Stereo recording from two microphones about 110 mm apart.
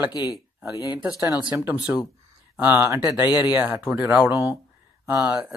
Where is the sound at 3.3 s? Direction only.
40° left (ahead or behind).